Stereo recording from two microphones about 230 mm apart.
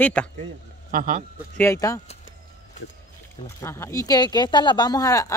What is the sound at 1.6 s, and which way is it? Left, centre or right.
Speech, centre.